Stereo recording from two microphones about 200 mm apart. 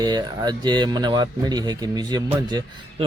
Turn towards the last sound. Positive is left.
turn(degrees=-20)  # may be behind; listen again after turning